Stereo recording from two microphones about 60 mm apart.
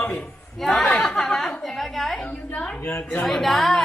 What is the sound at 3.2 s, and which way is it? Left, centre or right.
Speech, centre.